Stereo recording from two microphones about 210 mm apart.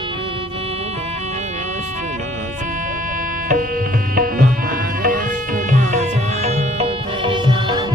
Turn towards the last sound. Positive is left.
turn(degrees=-20)  # may be behind; listen again after turning